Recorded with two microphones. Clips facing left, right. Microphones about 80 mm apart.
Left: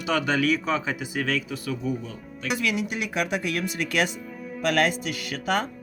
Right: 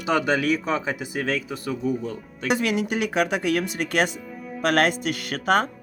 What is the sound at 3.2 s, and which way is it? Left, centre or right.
Speech, right.